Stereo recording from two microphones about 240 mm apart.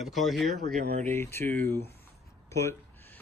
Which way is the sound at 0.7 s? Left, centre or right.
Right.